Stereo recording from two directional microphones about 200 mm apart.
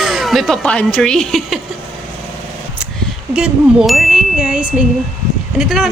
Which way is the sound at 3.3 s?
5° right (ahead or behind).